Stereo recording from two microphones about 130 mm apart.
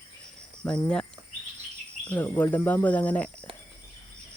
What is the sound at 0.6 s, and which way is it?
Speech, 15° left (ahead or behind).